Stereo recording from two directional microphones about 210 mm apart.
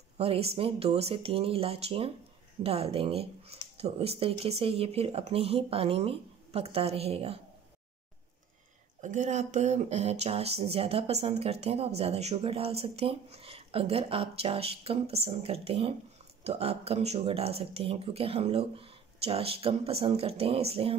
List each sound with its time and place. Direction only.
0.2 s speech: 30° right (ahead or behind)
9.0 s speech: 35° right (ahead or behind)